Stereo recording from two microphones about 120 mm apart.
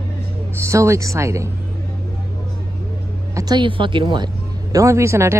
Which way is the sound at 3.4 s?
35° right (ahead or behind).